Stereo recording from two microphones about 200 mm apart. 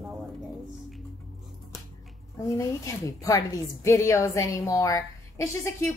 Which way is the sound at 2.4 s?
15° left (ahead or behind).